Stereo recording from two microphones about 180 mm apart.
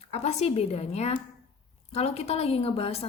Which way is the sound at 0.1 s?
35° left (ahead or behind).